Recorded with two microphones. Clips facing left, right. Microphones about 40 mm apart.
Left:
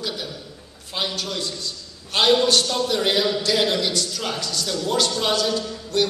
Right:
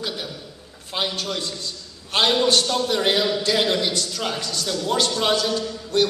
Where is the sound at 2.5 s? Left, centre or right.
Centre.